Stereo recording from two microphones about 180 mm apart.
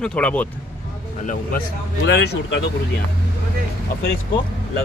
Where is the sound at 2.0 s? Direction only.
70° left (ahead or behind).